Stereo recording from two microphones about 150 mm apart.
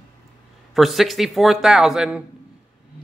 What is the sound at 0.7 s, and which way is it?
Speech, centre (ahead or behind).